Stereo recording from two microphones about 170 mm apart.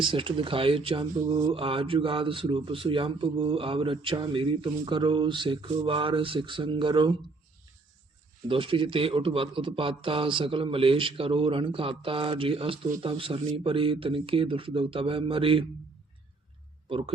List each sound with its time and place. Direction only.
0.0 s speech: 30° right (ahead or behind)
8.4 s speech: 30° right (ahead or behind)